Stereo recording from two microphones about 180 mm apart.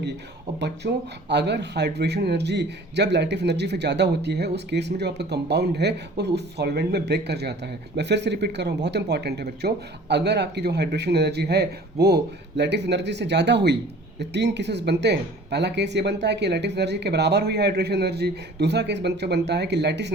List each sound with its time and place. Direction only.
0.8 s a man's voice: 60° right (ahead or behind)